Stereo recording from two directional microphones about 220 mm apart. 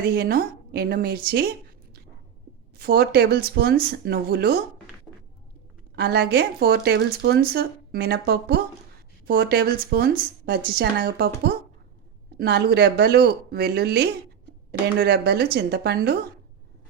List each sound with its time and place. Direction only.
0.0 s speech: 45° right (ahead or behind)
2.7 s speech: 45° right (ahead or behind)
6.0 s speech: 45° right (ahead or behind)